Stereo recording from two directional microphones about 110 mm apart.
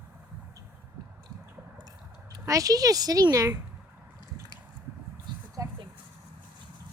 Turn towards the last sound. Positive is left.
turn(degrees=-25)  # may be behind; listen again after turning